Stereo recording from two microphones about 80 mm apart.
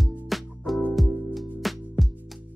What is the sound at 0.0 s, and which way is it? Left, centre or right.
Music, centre.